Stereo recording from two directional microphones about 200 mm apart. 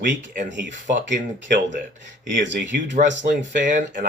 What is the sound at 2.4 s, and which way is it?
Speech, 65° right (ahead or behind).